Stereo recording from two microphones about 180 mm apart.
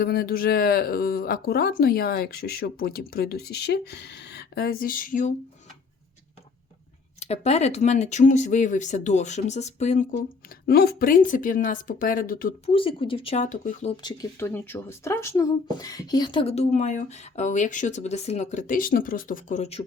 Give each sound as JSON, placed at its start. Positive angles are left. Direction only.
{"t": 0.0, "sound": "speech", "side_deg": 60}
{"t": 7.2, "sound": "speech", "side_deg": 35}
{"t": 10.7, "sound": "speech", "side_deg": 60}
{"t": 12.6, "sound": "speech", "side_deg": 30}
{"t": 13.9, "sound": "speech", "side_deg": 25}
{"t": 14.3, "sound": "speech", "side_deg": 10}